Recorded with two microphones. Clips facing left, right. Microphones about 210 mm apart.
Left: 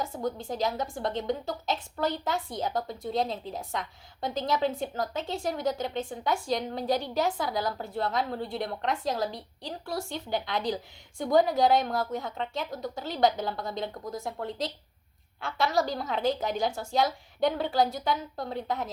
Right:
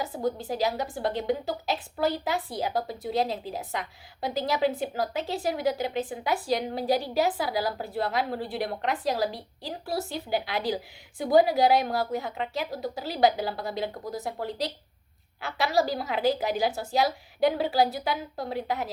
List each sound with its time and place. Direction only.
0.3 s a woman's voice: 5° right (ahead or behind)
15.4 s a woman's voice: 5° right (ahead or behind)